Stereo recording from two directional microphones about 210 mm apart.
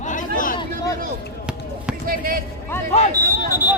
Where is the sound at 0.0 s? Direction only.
35° left (ahead or behind).